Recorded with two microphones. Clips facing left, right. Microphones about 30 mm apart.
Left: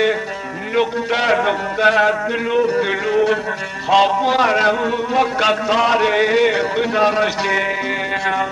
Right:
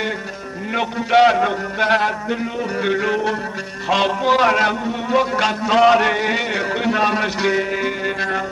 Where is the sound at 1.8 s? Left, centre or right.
Right.